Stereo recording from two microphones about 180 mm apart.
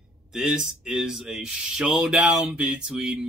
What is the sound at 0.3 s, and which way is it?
Speech, 5° right (ahead or behind).